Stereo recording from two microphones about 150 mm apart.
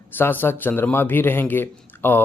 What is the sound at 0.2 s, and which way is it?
A man's voice, 15° left (ahead or behind).